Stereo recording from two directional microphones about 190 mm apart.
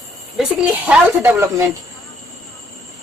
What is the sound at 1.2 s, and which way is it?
Speech, 10° right (ahead or behind).